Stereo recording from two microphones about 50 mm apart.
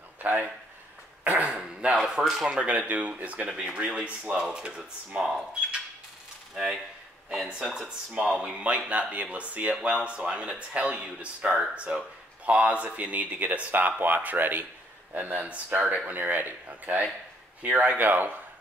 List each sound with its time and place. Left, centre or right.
0.2 s a sound: right
1.2 s speech: right
1.5 s speech: centre
2.6 s speech: right
7.2 s speech: centre
9.8 s speech: centre; by 18.3 s right